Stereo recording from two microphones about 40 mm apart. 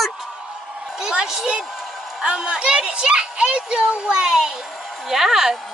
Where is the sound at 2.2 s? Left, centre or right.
Right.